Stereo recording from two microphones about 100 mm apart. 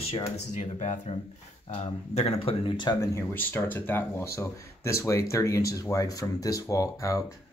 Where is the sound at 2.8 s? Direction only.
50° left (ahead or behind).